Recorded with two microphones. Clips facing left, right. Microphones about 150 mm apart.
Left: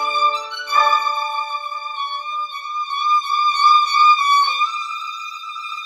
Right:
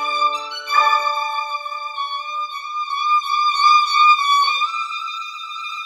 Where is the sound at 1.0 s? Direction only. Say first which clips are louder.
Even; centre (ahead or behind).